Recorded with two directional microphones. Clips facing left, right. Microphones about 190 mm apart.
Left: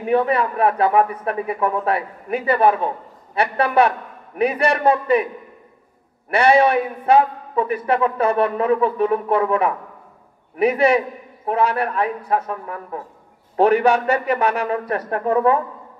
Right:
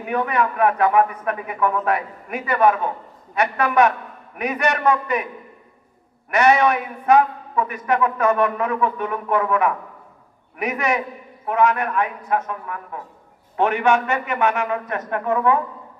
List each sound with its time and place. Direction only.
0.0 s a man's voice: 30° left (ahead or behind)
6.3 s a man's voice: 30° left (ahead or behind)